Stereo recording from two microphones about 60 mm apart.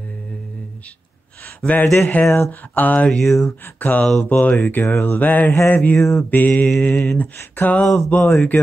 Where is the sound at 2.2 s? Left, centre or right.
Left.